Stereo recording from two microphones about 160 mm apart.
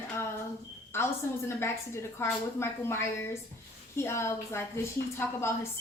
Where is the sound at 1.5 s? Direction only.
15° left (ahead or behind).